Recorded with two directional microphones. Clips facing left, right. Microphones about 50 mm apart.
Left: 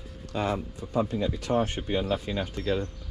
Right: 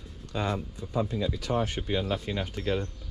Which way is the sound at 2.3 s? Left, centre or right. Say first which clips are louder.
Left 1 dB; centre.